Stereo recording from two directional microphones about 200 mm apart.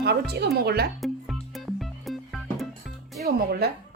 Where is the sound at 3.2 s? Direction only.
50° right (ahead or behind).